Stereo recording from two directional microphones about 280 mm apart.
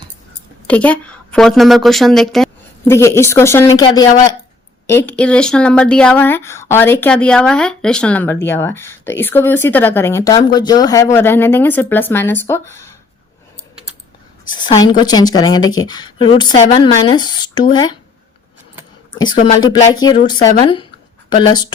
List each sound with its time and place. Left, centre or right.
0.7 s a woman's voice: centre
14.4 s speech: centre
19.6 s speech: centre